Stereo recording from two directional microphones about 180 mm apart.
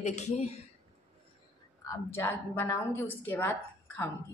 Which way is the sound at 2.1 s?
10° left (ahead or behind).